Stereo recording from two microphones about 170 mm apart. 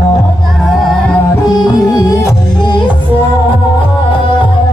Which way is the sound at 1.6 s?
20° left (ahead or behind).